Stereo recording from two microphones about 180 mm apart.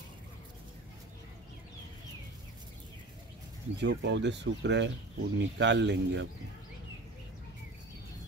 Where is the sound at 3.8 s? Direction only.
75° right (ahead or behind).